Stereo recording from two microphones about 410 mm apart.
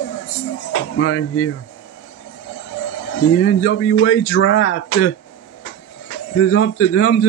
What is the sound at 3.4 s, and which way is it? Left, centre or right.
Speech, left.